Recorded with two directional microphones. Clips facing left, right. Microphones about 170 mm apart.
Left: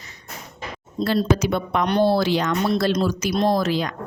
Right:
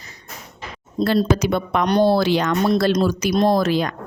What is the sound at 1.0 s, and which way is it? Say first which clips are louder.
Speech: right 2 dB; 60° right (ahead or behind).